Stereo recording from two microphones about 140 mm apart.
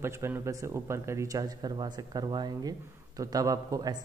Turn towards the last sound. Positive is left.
turn(degrees=-25)  # may be behind; listen again after turning